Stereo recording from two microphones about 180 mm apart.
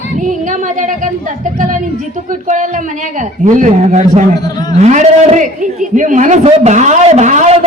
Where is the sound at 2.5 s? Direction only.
45° right (ahead or behind).